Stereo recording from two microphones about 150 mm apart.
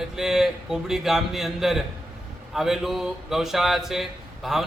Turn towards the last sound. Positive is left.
turn(degrees=0)  # may be behind; listen again after turning